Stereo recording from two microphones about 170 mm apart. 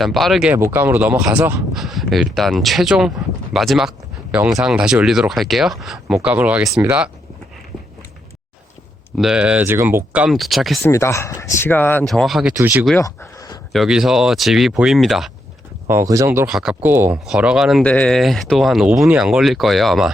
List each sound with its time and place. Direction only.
0.0 s speech: centre (ahead or behind)
0.5 s speech: 15° right (ahead or behind)
9.1 s speech: 5° right (ahead or behind)
10.8 s speech: 15° left (ahead or behind)
12.0 s speech: centre (ahead or behind)
12.5 s speech: 15° right (ahead or behind)
13.0 s a sound: 20° left (ahead or behind)
13.7 s speech: 5° right (ahead or behind)
15.9 s speech: 15° right (ahead or behind)
16.5 s speech: 5° right (ahead or behind)